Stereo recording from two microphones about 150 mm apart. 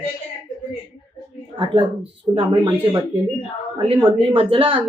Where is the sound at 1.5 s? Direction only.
40° right (ahead or behind).